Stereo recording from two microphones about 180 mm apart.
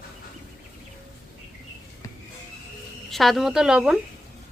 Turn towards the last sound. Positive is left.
turn(degrees=-5)  # may be behind; listen again after turning